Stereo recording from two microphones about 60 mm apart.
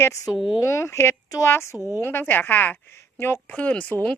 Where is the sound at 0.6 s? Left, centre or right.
Left.